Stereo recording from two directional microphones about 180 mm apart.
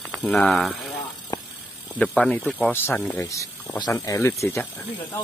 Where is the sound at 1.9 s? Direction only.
5° left (ahead or behind).